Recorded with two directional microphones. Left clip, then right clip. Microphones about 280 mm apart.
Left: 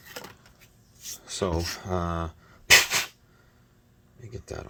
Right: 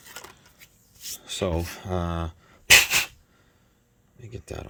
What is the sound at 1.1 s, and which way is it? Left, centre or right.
Rub, right.